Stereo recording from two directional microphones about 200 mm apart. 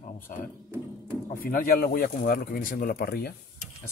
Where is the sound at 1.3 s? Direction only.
45° left (ahead or behind).